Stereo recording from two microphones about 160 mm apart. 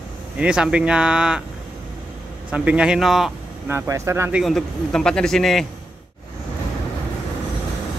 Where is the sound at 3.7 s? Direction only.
15° right (ahead or behind).